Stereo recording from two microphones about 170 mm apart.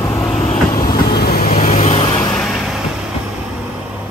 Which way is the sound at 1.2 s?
60° left (ahead or behind).